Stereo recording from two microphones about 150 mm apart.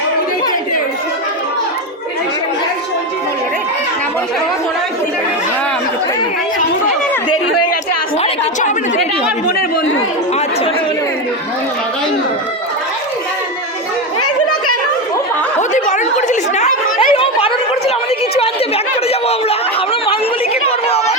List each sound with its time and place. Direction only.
9.5 s chatter: 80° left
15.7 s a sound: 55° left (ahead or behind)
17.0 s chatter: 40° left (ahead or behind)
19.0 s chatter: 40° left (ahead or behind)